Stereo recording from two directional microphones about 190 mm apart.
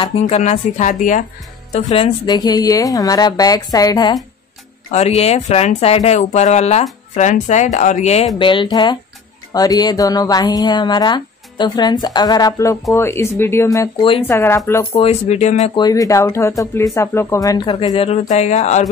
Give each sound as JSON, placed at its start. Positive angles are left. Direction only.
{"t": 0.2, "sound": "a woman's voice", "side_deg": 40}
{"t": 4.9, "sound": "speech", "side_deg": 35}
{"t": 8.4, "sound": "a woman's voice", "side_deg": 25}
{"t": 15.0, "sound": "speech", "side_deg": 35}
{"t": 15.7, "sound": "speech", "side_deg": 20}